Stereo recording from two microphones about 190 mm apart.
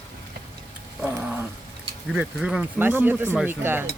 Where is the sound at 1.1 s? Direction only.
10° right (ahead or behind).